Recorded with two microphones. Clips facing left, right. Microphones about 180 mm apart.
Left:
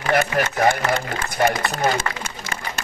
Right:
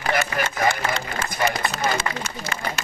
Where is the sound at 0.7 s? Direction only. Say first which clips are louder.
Left 4 dB; 65° left (ahead or behind).